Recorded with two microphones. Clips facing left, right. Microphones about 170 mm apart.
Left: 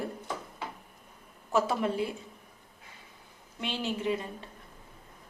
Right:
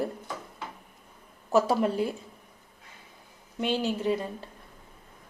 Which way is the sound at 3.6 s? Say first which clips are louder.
Right 5 dB; 40° right (ahead or behind).